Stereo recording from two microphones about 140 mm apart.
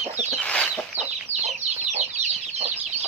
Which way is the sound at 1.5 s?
55° right (ahead or behind).